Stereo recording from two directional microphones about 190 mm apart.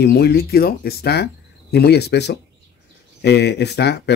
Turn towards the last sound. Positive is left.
turn(degrees=60)  # may be behind; listen again after turning